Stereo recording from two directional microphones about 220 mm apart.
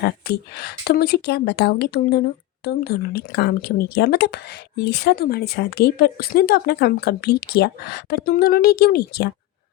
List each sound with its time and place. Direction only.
0.0 s a woman's voice: 45° left (ahead or behind)